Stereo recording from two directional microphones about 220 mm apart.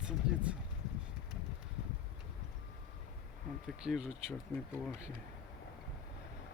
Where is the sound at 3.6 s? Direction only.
Centre (ahead or behind).